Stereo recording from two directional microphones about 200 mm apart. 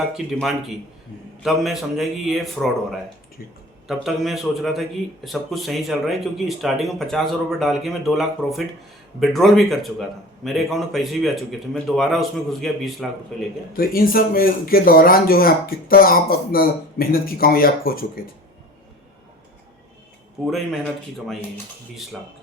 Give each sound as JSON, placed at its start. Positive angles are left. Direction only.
{"t": 0.1, "sound": "a man's voice", "side_deg": 0}
{"t": 3.8, "sound": "a man's voice", "side_deg": 0}
{"t": 13.7, "sound": "speech", "side_deg": 45}
{"t": 20.5, "sound": "a man's voice", "side_deg": 0}